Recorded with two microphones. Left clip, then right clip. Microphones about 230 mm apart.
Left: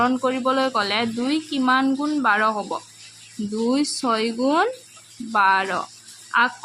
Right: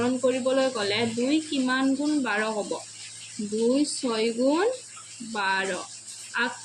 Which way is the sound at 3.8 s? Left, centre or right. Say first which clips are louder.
Left 4 dB; left.